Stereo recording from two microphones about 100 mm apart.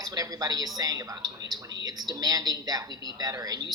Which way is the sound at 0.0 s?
40° right (ahead or behind).